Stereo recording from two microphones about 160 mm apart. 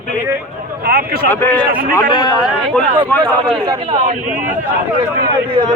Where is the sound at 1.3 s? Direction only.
15° left (ahead or behind).